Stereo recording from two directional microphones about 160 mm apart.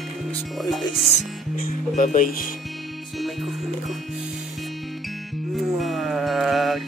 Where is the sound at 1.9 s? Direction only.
55° left (ahead or behind).